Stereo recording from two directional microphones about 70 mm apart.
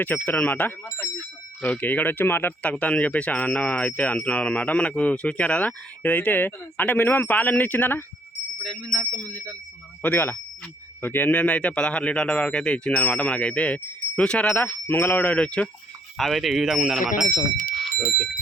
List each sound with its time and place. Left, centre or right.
0.0 s speech: left
0.9 s speech: left
1.7 s speech: left
2.6 s speech: centre
8.6 s a sound: centre
9.1 s speech: left
14.3 s a sound: centre
14.5 s speech: left
16.1 s speech: centre